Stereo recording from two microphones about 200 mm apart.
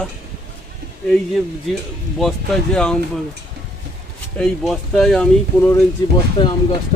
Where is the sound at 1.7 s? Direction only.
Centre (ahead or behind).